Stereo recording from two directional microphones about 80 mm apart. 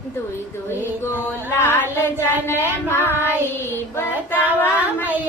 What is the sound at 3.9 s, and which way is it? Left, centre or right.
Child singing, left.